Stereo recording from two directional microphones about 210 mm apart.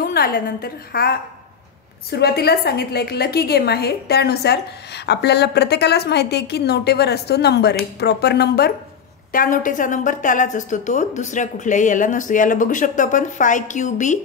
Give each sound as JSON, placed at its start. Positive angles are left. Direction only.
{"t": 0.0, "sound": "a woman's voice", "side_deg": 45}